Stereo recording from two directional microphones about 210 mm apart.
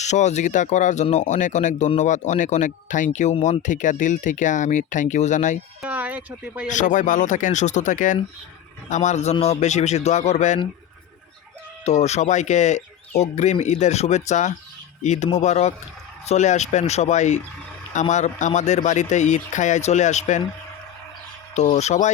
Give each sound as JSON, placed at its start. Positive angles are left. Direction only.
{"t": 0.0, "sound": "speech", "side_deg": 35}
{"t": 5.8, "sound": "speech", "side_deg": -5}
{"t": 6.7, "sound": "speech", "side_deg": 35}
{"t": 11.9, "sound": "speech", "side_deg": 30}
{"t": 21.5, "sound": "speech", "side_deg": 30}